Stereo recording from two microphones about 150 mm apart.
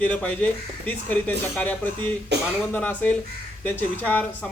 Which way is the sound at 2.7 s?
10° left (ahead or behind).